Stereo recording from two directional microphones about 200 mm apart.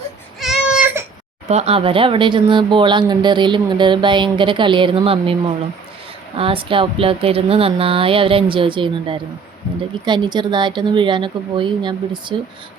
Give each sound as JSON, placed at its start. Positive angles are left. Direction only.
{"t": 0.3, "sound": "baby cry", "side_deg": -5}
{"t": 1.5, "sound": "speech", "side_deg": -30}